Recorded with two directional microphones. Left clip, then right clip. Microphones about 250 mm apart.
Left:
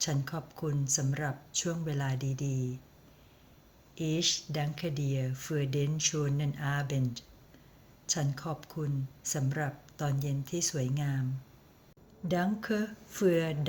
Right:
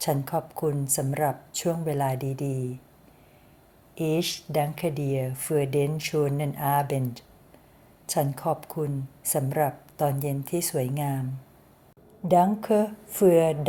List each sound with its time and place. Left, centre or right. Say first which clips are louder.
0.0 s speech: right 9 dB; centre
2.4 s speech: right 7 dB; right
3.9 s speech: right 4 dB; centre
12.3 s speech: right 12 dB; centre